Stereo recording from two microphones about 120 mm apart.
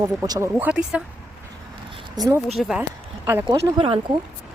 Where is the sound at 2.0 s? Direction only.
35° right (ahead or behind).